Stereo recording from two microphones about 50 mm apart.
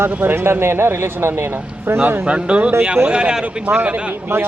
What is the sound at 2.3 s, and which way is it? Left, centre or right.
Speech, right.